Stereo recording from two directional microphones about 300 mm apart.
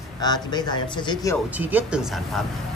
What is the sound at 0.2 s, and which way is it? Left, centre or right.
Speech, centre.